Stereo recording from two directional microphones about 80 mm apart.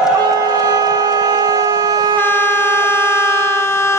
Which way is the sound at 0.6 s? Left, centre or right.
Right.